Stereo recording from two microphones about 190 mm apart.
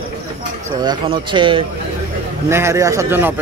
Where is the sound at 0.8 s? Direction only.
25° right (ahead or behind).